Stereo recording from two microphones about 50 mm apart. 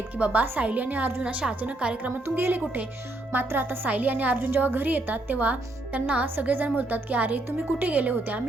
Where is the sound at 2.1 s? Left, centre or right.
Right.